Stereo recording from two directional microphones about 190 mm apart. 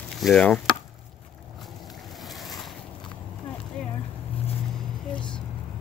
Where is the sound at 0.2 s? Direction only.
5° left (ahead or behind).